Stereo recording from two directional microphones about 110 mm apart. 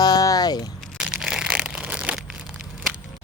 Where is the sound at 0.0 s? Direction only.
35° left (ahead or behind).